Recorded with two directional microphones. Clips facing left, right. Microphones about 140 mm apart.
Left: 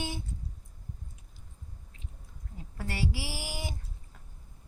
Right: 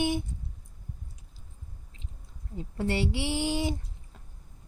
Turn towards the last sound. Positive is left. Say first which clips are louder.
# right 11 dB
turn(degrees=-25)  # may be behind; listen again after turning